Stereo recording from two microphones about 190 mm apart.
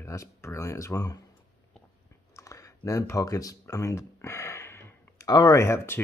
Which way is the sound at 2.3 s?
15° left (ahead or behind).